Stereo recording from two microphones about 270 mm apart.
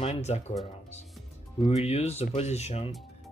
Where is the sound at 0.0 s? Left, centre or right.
Left.